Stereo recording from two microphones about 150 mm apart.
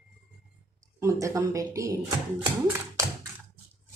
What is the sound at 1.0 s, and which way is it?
Speech, 20° right (ahead or behind).